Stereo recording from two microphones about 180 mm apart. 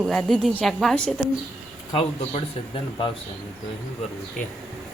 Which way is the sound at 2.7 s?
30° left (ahead or behind).